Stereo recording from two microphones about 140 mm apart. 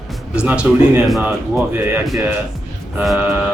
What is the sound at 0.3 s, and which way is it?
Speech, 5° right (ahead or behind).